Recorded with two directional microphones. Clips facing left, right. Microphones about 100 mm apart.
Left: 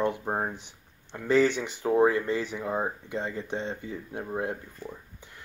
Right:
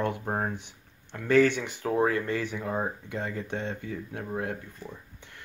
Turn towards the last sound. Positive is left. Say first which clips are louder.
# left 1 dB
turn(degrees=15)  # may be behind; listen again after turning